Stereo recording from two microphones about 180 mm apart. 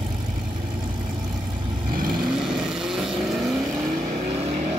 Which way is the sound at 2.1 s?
Centre (ahead or behind).